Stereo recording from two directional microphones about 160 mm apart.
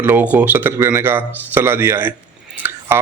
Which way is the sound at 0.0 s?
10° right (ahead or behind).